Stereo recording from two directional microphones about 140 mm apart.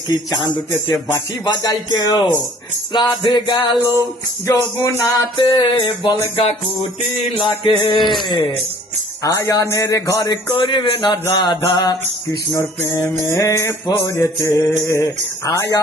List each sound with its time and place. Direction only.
1.6 s music: 30° left (ahead or behind)
9.2 s music: 25° left (ahead or behind)